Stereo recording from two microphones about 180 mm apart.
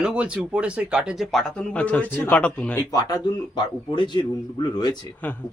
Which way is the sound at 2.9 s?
25° left (ahead or behind).